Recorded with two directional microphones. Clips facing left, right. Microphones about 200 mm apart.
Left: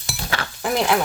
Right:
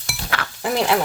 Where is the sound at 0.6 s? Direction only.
30° right (ahead or behind).